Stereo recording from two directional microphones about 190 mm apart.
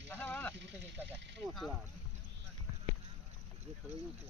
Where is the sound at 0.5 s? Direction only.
70° right (ahead or behind).